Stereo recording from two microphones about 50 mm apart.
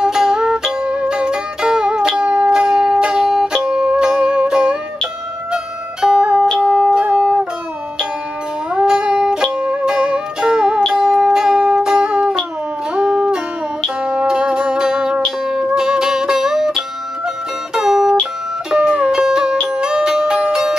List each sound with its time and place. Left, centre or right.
0.0 s music: centre
8.7 s music: centre
17.7 s music: centre